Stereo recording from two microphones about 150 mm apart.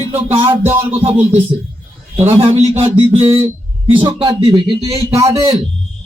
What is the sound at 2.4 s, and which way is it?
Speech, 40° right (ahead or behind).